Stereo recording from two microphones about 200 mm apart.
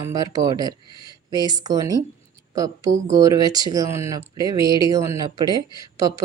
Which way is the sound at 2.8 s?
40° right (ahead or behind).